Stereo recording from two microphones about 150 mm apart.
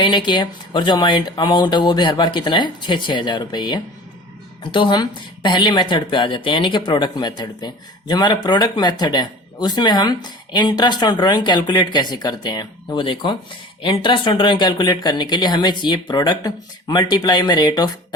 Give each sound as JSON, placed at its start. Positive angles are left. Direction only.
{"t": 0.0, "sound": "speech", "side_deg": 30}